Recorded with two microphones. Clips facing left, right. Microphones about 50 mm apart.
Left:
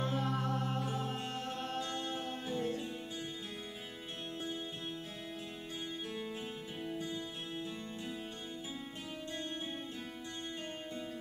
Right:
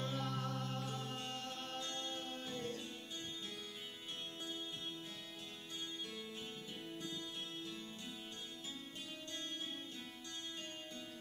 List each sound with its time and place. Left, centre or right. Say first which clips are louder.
0.0 s music: left 6 dB; centre
6.8 s music: left 8 dB; centre